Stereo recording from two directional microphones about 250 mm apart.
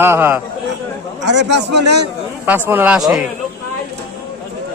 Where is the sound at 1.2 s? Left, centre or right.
Right.